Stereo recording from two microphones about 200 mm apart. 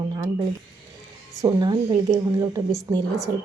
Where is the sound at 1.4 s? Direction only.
20° right (ahead or behind).